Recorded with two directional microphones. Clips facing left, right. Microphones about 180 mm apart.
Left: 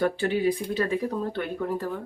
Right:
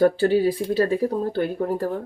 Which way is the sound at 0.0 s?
35° right (ahead or behind).